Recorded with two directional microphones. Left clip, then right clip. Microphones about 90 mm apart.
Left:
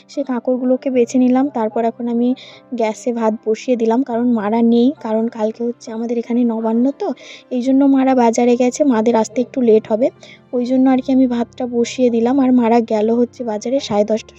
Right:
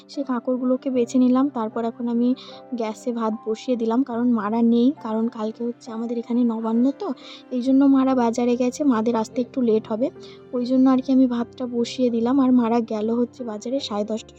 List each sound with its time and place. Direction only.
0.2 s a woman's voice: 55° left (ahead or behind)
2.7 s a woman's voice: 55° left (ahead or behind)
5.3 s a woman's voice: 45° left (ahead or behind)
6.4 s a woman's voice: 45° left (ahead or behind)
7.7 s a woman's voice: 35° left (ahead or behind)
7.9 s a woman's voice: 60° left (ahead or behind)
12.6 s a woman's voice: 70° left (ahead or behind)